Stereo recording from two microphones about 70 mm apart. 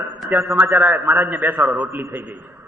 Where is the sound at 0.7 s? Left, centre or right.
Right.